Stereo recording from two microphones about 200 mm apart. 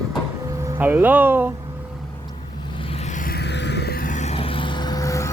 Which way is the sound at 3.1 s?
45° left (ahead or behind).